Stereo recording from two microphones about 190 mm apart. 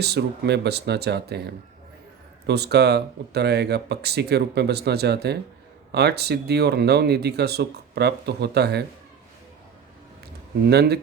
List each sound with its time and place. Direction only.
0.0 s speech: 60° right (ahead or behind)
2.5 s speech: 60° right (ahead or behind)
10.7 s speech: 60° right (ahead or behind)